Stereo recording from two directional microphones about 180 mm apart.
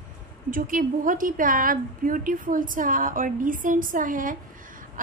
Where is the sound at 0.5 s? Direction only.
50° right (ahead or behind).